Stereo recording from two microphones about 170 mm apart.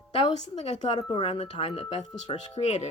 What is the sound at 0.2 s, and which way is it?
A woman's voice, 40° left (ahead or behind).